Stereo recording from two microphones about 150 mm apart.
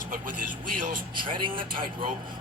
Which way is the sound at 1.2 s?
35° right (ahead or behind).